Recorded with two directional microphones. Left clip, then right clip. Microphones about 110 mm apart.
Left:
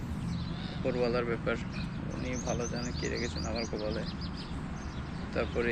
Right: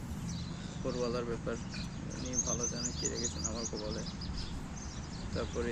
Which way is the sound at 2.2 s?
70° right (ahead or behind).